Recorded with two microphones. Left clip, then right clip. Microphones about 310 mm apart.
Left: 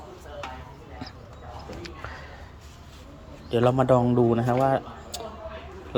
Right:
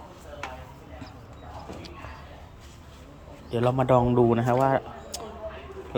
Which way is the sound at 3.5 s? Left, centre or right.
Centre.